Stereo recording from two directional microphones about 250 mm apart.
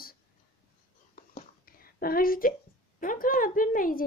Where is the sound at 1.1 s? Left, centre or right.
Left.